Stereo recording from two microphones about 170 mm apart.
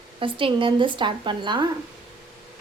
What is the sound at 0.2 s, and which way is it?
A woman's voice, 30° right (ahead or behind).